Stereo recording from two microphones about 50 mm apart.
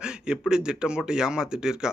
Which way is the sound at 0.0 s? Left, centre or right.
Centre.